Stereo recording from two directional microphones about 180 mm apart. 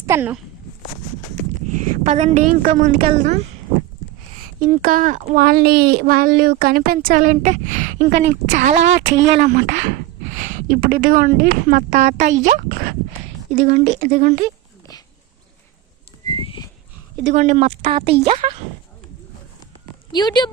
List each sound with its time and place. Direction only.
0.0 s speech: 15° right (ahead or behind)
1.7 s a woman's voice: 40° right (ahead or behind)
4.6 s a woman's voice: 50° right (ahead or behind)
16.3 s livestock: 25° left (ahead or behind)
17.2 s a woman's voice: 40° right (ahead or behind)
20.1 s speech: 25° left (ahead or behind)